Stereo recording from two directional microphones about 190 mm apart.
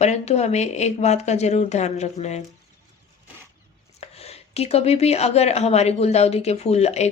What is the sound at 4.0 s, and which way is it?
Speech, 35° left (ahead or behind).